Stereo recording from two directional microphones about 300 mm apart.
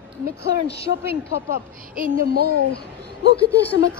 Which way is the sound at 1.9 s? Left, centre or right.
Right.